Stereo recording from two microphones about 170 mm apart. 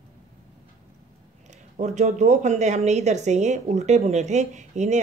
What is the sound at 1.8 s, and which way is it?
A woman's voice, 45° right (ahead or behind).